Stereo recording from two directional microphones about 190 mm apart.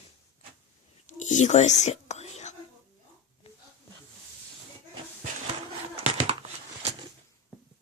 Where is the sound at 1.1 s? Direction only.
40° left (ahead or behind).